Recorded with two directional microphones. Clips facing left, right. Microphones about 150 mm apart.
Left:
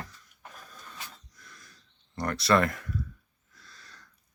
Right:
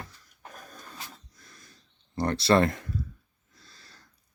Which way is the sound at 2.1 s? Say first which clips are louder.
Right 2 dB; 30° right (ahead or behind).